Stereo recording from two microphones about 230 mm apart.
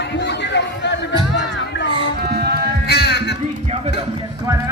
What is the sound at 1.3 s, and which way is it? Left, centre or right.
Music, left.